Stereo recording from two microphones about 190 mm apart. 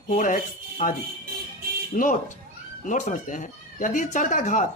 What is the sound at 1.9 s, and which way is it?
Speech, 45° left (ahead or behind).